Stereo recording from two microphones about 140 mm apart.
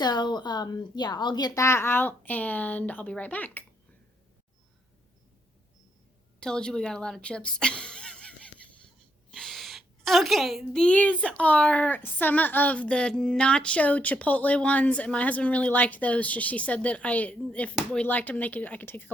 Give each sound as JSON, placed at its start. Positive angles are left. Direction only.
{"t": 0.0, "sound": "a woman's voice", "side_deg": 30}
{"t": 6.4, "sound": "a woman's voice", "side_deg": 5}